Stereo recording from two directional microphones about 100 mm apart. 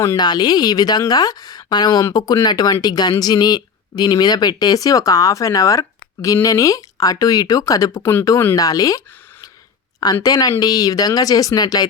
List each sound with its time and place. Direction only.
0.2 s speech: 45° left (ahead or behind)
10.2 s speech: 40° left (ahead or behind)